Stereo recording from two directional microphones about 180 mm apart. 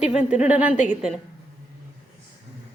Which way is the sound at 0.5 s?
5° right (ahead or behind).